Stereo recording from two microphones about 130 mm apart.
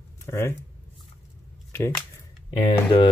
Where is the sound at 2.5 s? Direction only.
40° left (ahead or behind).